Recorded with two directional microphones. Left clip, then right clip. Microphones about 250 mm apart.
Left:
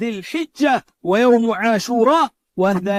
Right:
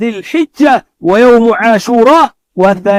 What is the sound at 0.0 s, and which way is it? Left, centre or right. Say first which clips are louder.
Speech: right 10 dB; left.